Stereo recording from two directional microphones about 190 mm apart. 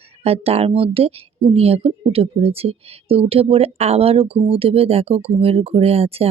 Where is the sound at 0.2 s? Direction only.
35° right (ahead or behind).